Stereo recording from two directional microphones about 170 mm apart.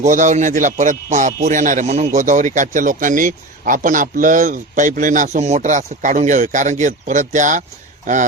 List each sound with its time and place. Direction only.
0.0 s a man's voice: 45° right (ahead or behind)